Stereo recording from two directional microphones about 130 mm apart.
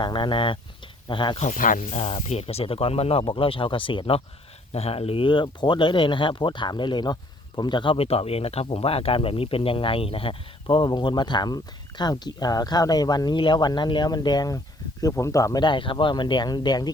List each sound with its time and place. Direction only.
0.0 s speech: 40° left (ahead or behind)
1.4 s speech: 90° left
2.0 s speech: 55° left (ahead or behind); by 16.9 s 30° left (ahead or behind)